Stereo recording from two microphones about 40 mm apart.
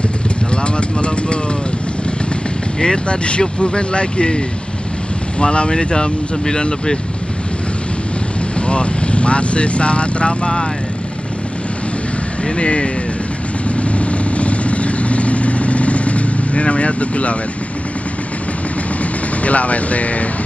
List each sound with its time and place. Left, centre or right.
0.7 s vehicle: left
2.8 s speech: left
5.4 s speech: left
8.5 s speech: left
12.5 s speech: left
13.7 s vehicle: left
19.4 s speech: left